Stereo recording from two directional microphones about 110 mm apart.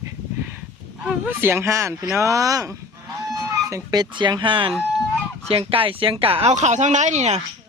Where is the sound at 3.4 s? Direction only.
25° right (ahead or behind).